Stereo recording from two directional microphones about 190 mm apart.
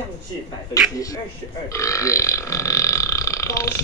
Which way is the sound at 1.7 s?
15° left (ahead or behind).